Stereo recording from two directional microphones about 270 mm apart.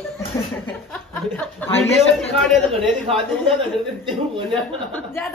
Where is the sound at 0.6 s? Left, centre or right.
Centre.